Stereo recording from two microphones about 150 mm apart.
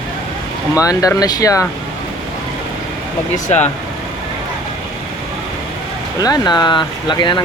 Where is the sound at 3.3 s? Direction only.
50° left (ahead or behind).